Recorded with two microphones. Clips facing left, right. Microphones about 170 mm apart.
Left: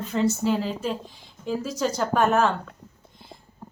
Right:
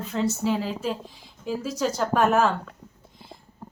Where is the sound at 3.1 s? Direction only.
Centre (ahead or behind).